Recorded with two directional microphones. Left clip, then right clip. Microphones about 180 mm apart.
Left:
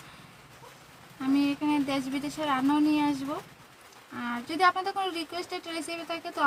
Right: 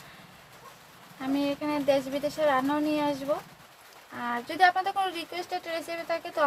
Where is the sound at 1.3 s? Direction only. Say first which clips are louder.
Left 2 dB; 30° right (ahead or behind).